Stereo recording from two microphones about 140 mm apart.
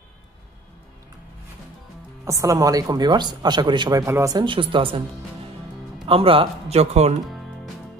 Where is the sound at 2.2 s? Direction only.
25° right (ahead or behind).